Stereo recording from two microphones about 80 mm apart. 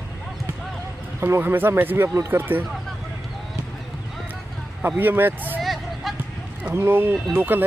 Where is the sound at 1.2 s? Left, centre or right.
Right.